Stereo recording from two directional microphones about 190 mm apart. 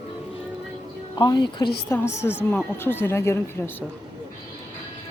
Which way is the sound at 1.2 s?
20° left (ahead or behind).